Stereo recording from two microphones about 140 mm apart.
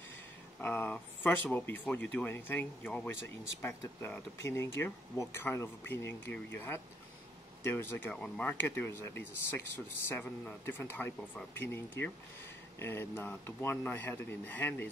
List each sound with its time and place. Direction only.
0.6 s speech: 15° left (ahead or behind)